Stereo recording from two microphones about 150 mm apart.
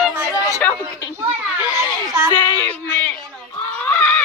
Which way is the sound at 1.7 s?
20° right (ahead or behind).